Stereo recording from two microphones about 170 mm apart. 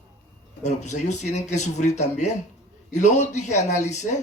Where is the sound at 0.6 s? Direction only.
45° left (ahead or behind).